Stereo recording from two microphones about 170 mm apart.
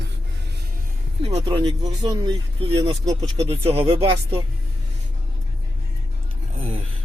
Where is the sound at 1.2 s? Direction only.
30° right (ahead or behind).